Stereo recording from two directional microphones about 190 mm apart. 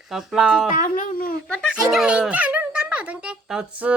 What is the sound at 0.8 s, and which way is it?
Speech, 45° left (ahead or behind).